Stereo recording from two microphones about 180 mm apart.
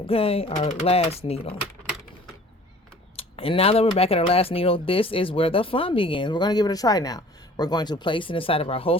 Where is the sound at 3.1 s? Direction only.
30° left (ahead or behind).